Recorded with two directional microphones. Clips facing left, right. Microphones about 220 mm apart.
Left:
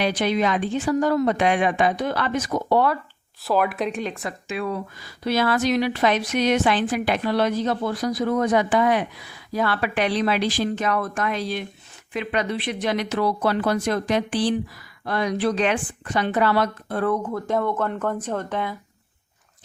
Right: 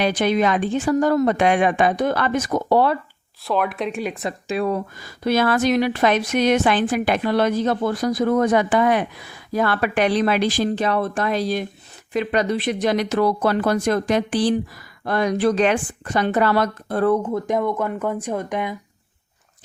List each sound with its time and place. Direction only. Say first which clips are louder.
0.0 s speech: right 3 dB; 50° right (ahead or behind)
3.4 s speech: even; centre (ahead or behind)
4.0 s speech: right 3 dB; 20° right (ahead or behind)
4.4 s speech: right 5 dB; 40° right (ahead or behind)
10.7 s speech: right 3 dB; 30° right (ahead or behind)
17.3 s speech: right 2 dB; 15° right (ahead or behind)